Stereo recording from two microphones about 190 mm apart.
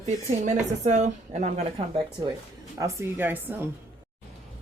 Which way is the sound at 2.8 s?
15° right (ahead or behind).